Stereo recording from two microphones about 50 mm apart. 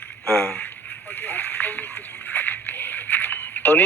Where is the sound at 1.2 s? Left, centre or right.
Left.